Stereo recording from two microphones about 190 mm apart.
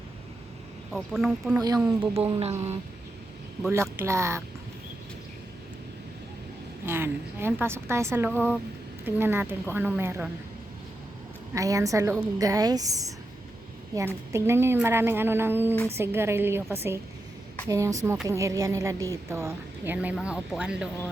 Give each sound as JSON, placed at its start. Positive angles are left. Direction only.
{"t": 0.9, "sound": "speech", "side_deg": 0}
{"t": 1.5, "sound": "speech", "side_deg": -20}
{"t": 2.1, "sound": "speech", "side_deg": -30}
{"t": 3.7, "sound": "speech", "side_deg": -15}
{"t": 6.8, "sound": "speech", "side_deg": -10}
{"t": 8.3, "sound": "speech", "side_deg": 10}
{"t": 9.0, "sound": "speech", "side_deg": -10}
{"t": 11.5, "sound": "speech", "side_deg": -15}